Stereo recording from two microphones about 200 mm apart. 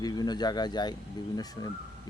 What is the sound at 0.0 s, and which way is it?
Speech, 20° left (ahead or behind).